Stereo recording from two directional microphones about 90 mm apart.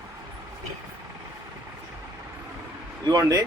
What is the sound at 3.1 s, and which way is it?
Speech, 45° right (ahead or behind).